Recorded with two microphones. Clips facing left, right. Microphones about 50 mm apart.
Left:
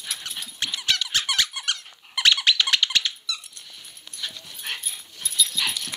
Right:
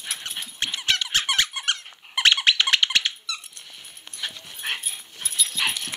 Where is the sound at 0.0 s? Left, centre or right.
Right.